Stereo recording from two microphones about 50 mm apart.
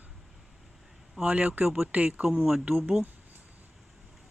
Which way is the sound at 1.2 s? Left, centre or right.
Right.